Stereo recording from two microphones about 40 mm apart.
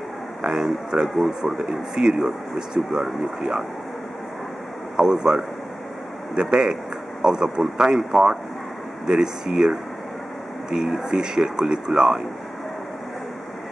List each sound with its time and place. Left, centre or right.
0.4 s speech: right
1.0 s speech: centre
4.9 s speech: centre